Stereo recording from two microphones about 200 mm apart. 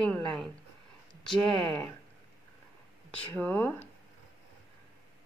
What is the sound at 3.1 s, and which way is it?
Speech, 10° left (ahead or behind).